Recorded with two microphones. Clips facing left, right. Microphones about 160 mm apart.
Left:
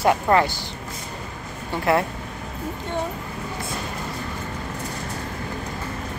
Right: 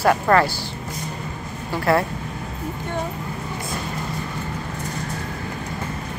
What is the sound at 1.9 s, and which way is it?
Speech, 20° left (ahead or behind).